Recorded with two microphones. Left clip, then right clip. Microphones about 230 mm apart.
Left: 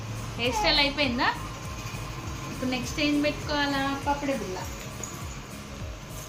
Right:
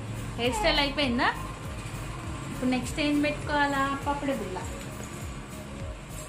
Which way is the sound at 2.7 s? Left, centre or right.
Centre.